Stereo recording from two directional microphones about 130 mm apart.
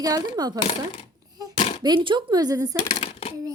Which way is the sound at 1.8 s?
35° right (ahead or behind).